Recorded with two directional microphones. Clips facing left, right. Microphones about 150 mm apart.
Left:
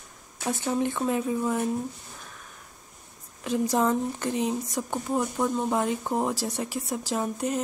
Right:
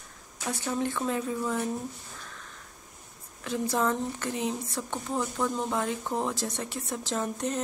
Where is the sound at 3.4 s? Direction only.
15° left (ahead or behind).